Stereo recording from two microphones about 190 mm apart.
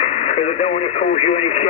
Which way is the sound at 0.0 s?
35° left (ahead or behind).